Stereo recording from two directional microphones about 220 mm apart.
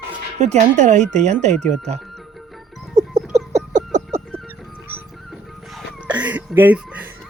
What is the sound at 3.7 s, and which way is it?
Music, 30° right (ahead or behind).